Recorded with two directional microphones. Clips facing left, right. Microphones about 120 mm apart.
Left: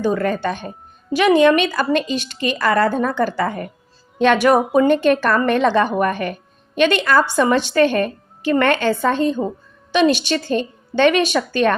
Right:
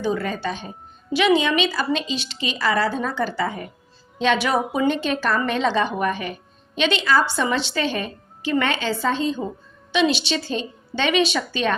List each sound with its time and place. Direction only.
0.0 s a woman's voice: 50° left (ahead or behind)